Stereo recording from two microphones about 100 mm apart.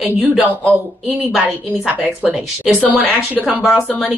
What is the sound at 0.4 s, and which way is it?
Speech, 5° right (ahead or behind).